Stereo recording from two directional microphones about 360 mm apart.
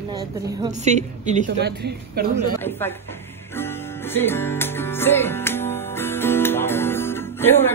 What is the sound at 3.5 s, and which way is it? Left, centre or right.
Music, centre.